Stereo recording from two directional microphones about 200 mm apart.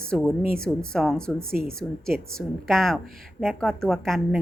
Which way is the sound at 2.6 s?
Centre (ahead or behind).